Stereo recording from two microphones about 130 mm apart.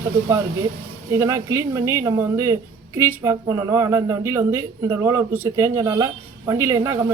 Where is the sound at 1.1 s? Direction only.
20° right (ahead or behind).